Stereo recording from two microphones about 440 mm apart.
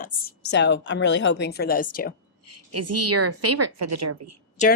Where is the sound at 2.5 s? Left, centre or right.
Right.